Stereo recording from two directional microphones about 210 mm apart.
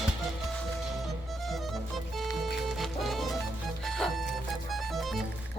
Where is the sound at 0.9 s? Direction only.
Centre (ahead or behind).